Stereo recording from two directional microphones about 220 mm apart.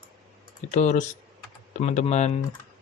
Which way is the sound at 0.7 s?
35° left (ahead or behind).